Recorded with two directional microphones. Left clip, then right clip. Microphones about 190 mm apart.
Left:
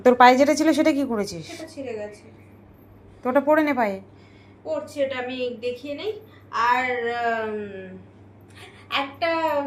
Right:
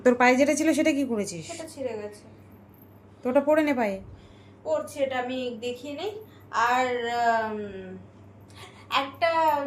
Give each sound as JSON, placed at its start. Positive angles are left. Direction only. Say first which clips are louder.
{"t": 0.0, "sound": "a woman's voice", "louder": "left 6 dB", "side_deg": 5}
{"t": 1.4, "sound": "a woman's voice", "louder": "right 1 dB", "side_deg": -55}
{"t": 3.2, "sound": "a woman's voice", "louder": "left 3 dB", "side_deg": 0}
{"t": 4.6, "sound": "speech", "louder": "left 1 dB", "side_deg": -50}
{"t": 5.0, "sound": "a woman's voice", "louder": "left 2 dB", "side_deg": -35}
{"t": 8.5, "sound": "a sound", "louder": "left 1 dB", "side_deg": -55}